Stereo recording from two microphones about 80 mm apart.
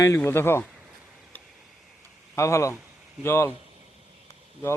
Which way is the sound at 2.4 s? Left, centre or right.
Left.